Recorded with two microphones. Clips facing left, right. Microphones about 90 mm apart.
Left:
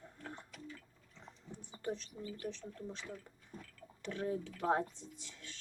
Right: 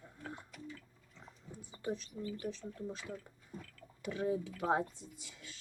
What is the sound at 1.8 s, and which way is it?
A woman's voice, 5° right (ahead or behind).